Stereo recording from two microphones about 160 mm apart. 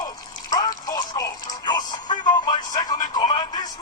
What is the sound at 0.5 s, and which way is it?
Music, 25° left (ahead or behind).